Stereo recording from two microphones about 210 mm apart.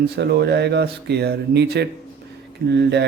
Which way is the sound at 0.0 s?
50° right (ahead or behind).